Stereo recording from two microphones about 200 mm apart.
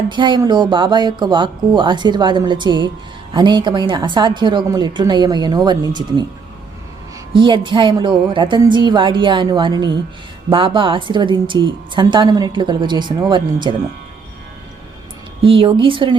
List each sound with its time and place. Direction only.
0.1 s a woman's voice: 25° right (ahead or behind)
7.3 s a woman's voice: 25° right (ahead or behind)
15.4 s a woman's voice: 25° right (ahead or behind)